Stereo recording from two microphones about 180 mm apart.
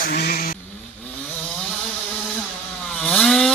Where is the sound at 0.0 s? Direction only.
60° left (ahead or behind).